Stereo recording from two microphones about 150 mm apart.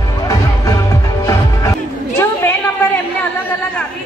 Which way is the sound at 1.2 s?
20° left (ahead or behind).